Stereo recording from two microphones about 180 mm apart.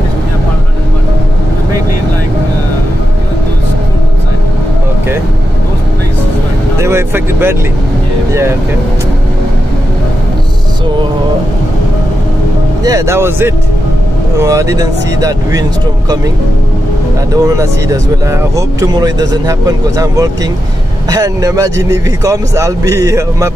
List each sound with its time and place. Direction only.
6.8 s speech: 15° right (ahead or behind)
12.8 s a man's voice: 15° right (ahead or behind)
17.3 s a man's voice: 20° right (ahead or behind)